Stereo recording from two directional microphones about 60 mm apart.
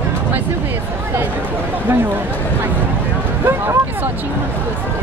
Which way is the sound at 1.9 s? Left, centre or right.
Right.